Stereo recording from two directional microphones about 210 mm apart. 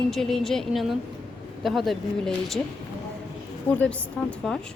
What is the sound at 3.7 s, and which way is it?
Speech, 5° left (ahead or behind).